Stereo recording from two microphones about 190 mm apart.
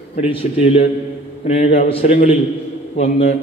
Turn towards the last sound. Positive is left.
turn(degrees=35)  # may be behind; listen again after turning